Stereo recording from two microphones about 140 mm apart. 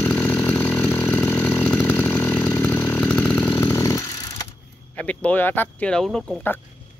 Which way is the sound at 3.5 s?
20° left (ahead or behind).